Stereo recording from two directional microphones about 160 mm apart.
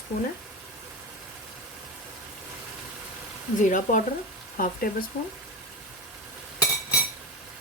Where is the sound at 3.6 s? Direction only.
55° left (ahead or behind).